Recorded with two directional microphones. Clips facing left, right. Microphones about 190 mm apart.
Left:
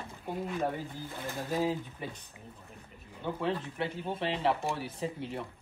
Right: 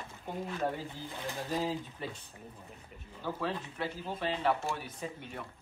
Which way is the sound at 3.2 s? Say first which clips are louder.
Left 3 dB; 20° left (ahead or behind).